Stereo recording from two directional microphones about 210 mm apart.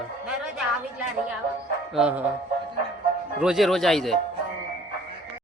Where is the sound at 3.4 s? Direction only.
Centre (ahead or behind).